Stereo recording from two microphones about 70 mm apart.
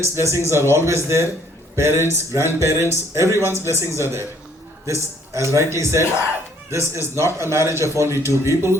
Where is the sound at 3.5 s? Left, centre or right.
Left.